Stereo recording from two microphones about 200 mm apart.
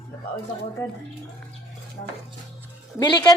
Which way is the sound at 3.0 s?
20° left (ahead or behind).